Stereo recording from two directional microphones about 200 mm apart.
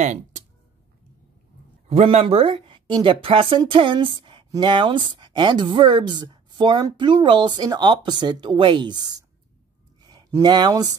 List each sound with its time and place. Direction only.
0.0 s speech: 35° right (ahead or behind)
1.9 s speech: 30° right (ahead or behind)